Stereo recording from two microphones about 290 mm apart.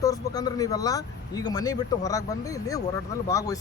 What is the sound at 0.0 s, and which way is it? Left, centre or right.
Speech, centre.